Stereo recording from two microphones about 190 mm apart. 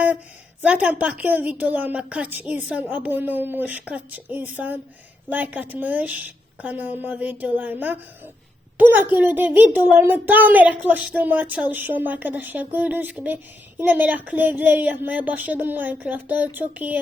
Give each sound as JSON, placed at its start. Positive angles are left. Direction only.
{"t": 0.6, "sound": "speech", "side_deg": -5}